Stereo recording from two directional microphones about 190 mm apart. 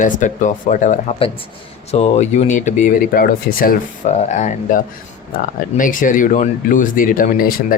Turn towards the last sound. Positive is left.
turn(degrees=45)  # may be behind; listen again after turning